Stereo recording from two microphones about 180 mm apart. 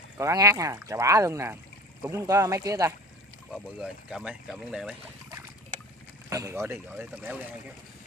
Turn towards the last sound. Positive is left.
turn(degrees=-10)  # may be behind; listen again after turning